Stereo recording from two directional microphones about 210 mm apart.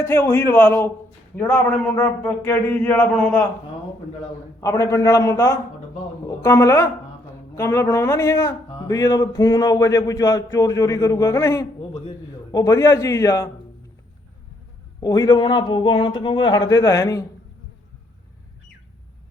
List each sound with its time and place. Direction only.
0.0 s speech: 10° left (ahead or behind)
4.6 s speech: 15° left (ahead or behind)
15.0 s speech: 15° left (ahead or behind)